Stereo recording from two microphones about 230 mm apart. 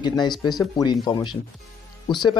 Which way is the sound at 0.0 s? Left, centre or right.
Centre.